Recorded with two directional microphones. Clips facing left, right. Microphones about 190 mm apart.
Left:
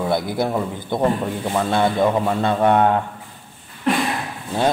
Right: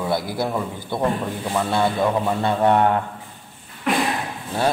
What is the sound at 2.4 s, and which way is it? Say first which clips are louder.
Speech: left 1 dB; 20° left (ahead or behind).